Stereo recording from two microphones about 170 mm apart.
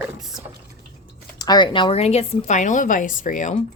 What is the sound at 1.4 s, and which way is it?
Speech, 25° left (ahead or behind).